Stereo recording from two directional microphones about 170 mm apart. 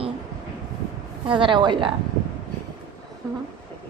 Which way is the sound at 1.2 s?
30° right (ahead or behind).